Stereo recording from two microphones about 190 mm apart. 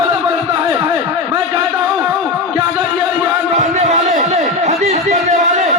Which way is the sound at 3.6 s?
35° right (ahead or behind).